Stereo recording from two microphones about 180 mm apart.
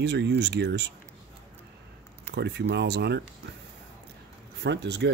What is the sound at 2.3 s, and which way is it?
Speech, 70° right (ahead or behind).